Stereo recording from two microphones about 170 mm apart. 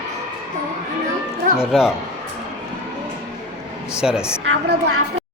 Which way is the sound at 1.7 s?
Centre (ahead or behind).